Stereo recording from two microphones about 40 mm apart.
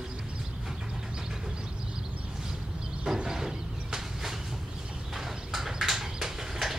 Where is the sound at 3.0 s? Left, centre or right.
Centre.